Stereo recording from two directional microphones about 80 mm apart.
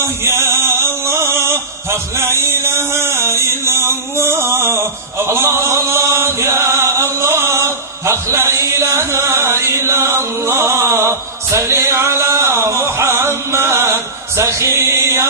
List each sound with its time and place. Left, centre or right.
0.0 s music: right